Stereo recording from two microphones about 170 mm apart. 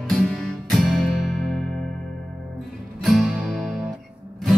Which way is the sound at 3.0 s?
Centre (ahead or behind).